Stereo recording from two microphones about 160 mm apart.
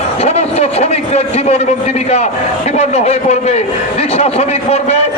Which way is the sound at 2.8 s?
45° left (ahead or behind).